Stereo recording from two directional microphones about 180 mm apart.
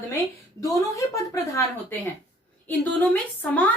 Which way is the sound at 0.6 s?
20° left (ahead or behind).